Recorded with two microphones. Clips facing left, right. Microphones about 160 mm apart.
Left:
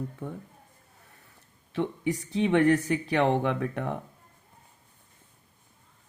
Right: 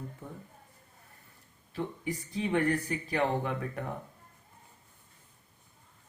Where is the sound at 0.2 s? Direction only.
70° left (ahead or behind).